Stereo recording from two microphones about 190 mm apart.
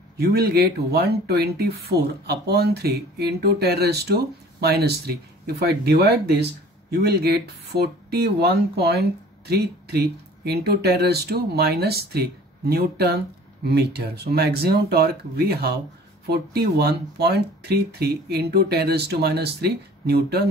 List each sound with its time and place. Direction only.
0.2 s speech: 55° right (ahead or behind)